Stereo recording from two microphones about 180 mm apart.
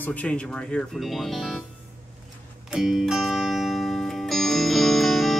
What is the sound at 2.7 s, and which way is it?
Music, centre (ahead or behind).